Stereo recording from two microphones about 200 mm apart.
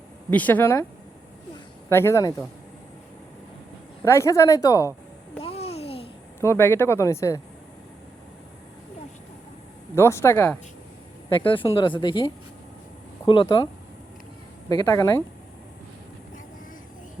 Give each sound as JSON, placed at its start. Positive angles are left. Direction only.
{"t": 0.3, "sound": "speech", "side_deg": 10}
{"t": 1.9, "sound": "speech", "side_deg": 15}
{"t": 4.0, "sound": "speech", "side_deg": 15}
{"t": 5.4, "sound": "babbling", "side_deg": 30}
{"t": 6.4, "sound": "speech", "side_deg": 15}
{"t": 9.9, "sound": "speech", "side_deg": 15}
{"t": 11.4, "sound": "speech", "side_deg": 25}
{"t": 14.7, "sound": "speech", "side_deg": 20}